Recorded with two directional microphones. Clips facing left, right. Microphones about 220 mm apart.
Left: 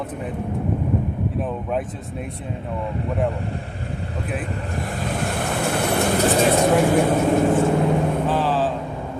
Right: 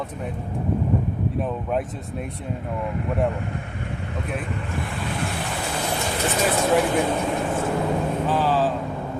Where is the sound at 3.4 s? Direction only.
35° left (ahead or behind).